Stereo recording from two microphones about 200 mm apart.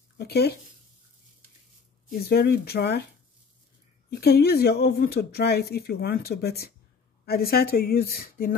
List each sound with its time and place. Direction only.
0.2 s speech: 50° left (ahead or behind)
2.0 s speech: 50° left (ahead or behind)
4.1 s speech: 50° left (ahead or behind)